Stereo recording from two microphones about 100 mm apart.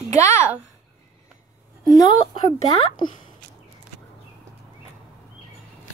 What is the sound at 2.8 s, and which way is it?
Speech, 55° left (ahead or behind).